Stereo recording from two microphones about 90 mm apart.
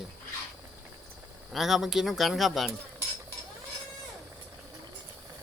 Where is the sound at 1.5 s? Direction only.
5° right (ahead or behind).